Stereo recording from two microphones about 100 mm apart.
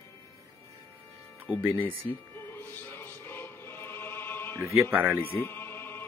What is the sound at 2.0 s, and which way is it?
Music, 25° left (ahead or behind).